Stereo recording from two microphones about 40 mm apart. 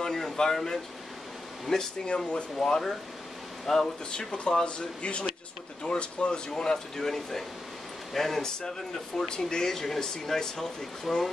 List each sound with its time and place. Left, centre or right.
0.0 s speech: centre
2.0 s speech: left
2.5 s speech: centre
4.1 s speech: left